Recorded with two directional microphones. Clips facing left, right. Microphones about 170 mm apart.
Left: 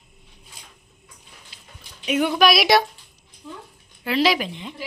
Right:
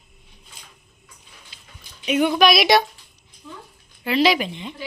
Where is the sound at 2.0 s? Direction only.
Centre (ahead or behind).